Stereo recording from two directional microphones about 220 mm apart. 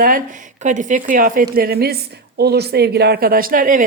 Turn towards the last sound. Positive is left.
turn(degrees=-40)  # may be behind; listen again after turning